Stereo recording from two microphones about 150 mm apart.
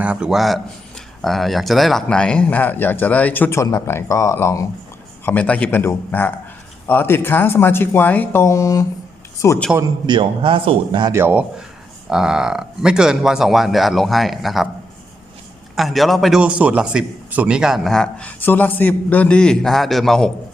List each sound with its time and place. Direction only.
0.0 s speech: 5° right (ahead or behind); by 8.9 s 20° left (ahead or behind)
9.7 s a man's voice: 25° right (ahead or behind)
11.1 s a man's voice: 15° right (ahead or behind)
15.7 s a man's voice: centre (ahead or behind)